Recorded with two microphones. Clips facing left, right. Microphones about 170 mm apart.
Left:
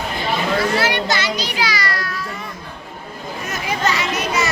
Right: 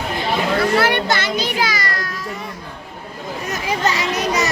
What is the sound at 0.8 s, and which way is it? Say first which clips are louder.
Children playing: right 2 dB; 55° right (ahead or behind).